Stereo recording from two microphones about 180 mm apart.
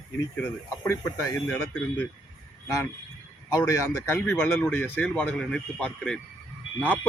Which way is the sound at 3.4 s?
20° left (ahead or behind).